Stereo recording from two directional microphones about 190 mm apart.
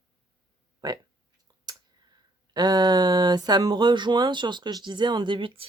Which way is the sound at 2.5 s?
20° right (ahead or behind).